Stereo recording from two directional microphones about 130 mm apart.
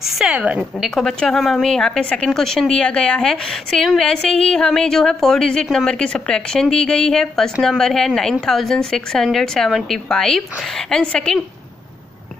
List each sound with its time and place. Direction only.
0.0 s a woman's voice: 5° right (ahead or behind)